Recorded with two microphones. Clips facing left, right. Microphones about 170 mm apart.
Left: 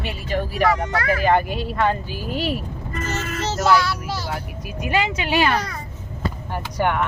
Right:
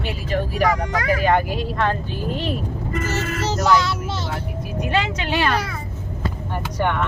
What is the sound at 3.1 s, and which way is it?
Speech, 10° right (ahead or behind).